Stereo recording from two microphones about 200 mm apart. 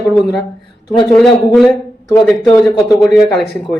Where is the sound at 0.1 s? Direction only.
Centre (ahead or behind).